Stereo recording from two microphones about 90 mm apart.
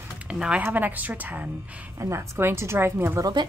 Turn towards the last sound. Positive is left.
turn(degrees=-55)  # may be behind; listen again after turning